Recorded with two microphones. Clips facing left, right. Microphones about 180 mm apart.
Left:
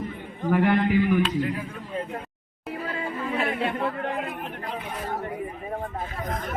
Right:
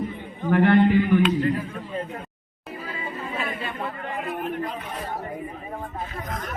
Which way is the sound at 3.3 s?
65° left (ahead or behind).